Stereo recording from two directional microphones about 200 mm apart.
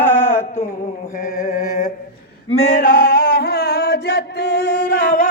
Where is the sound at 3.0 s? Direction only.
45° left (ahead or behind).